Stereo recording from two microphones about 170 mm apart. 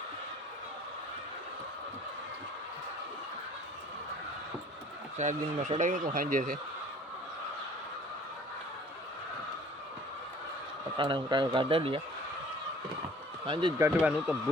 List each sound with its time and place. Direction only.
5.1 s speech: 45° right (ahead or behind)
10.9 s speech: 30° right (ahead or behind)
13.4 s speech: 30° right (ahead or behind)
13.8 s speech: 10° right (ahead or behind)